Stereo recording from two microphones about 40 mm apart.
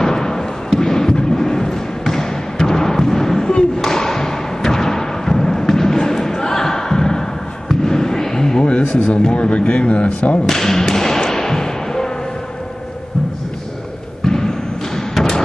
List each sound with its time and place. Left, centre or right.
0.0 s a sound: centre
8.6 s a sound: left
9.3 s speech: left
10.4 s thump: centre
14.2 s basketball bounce: centre
15.0 s thump: centre